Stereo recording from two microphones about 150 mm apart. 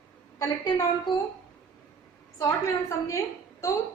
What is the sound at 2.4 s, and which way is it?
A woman's voice, 20° left (ahead or behind).